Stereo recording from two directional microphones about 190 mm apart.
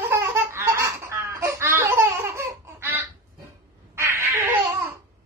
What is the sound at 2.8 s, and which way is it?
Fowl, 10° right (ahead or behind).